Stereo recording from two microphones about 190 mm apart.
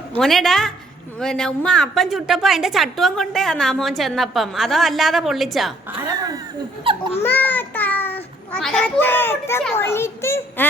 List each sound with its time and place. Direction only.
0.2 s a woman's voice: centre (ahead or behind)
5.9 s speech: 20° right (ahead or behind)
7.2 s a child's voice: 10° left (ahead or behind)